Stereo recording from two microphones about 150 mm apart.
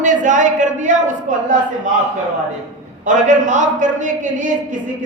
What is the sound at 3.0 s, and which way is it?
A man's voice, 55° right (ahead or behind).